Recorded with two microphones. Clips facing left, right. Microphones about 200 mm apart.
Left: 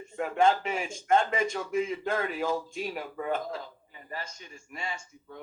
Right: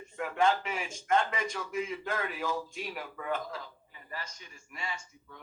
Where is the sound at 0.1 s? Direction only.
30° left (ahead or behind).